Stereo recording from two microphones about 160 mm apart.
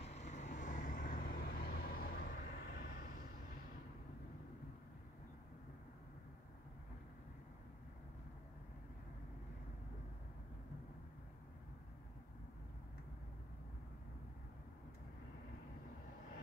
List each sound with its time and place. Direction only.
0.0 s vehicle: 45° left (ahead or behind); by 3.1 s 80° left